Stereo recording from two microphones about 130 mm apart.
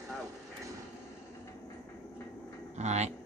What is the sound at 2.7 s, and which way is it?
Speech, 60° right (ahead or behind).